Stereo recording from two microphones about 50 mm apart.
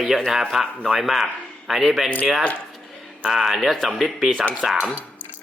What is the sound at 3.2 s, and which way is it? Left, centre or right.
A man's voice, centre.